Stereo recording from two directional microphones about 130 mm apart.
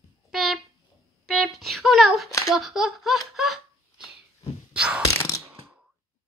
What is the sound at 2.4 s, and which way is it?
Laughter, centre (ahead or behind).